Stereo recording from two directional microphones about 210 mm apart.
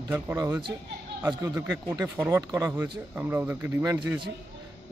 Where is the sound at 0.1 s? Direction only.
10° right (ahead or behind).